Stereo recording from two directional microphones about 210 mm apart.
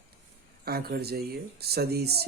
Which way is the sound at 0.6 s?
50° right (ahead or behind).